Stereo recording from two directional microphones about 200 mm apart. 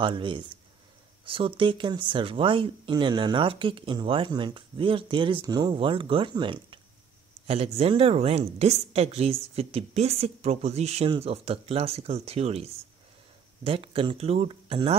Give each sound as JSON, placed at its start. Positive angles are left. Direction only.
{"t": 0.0, "sound": "a woman's voice", "side_deg": -25}
{"t": 13.7, "sound": "speech", "side_deg": -25}